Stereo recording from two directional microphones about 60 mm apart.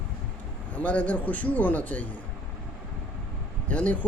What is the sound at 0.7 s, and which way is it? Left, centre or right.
Speech, left.